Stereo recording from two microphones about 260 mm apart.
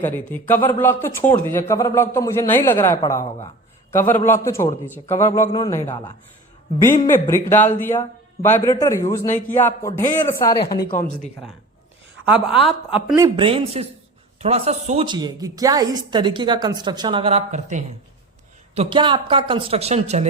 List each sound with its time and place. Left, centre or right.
0.0 s a man's voice: centre
7.5 s a man's voice: left
7.9 s a man's voice: centre
9.2 s a man's voice: left
9.6 s a man's voice: centre
10.8 s a man's voice: left
12.2 s a woman's voice: centre
13.1 s a woman's voice: centre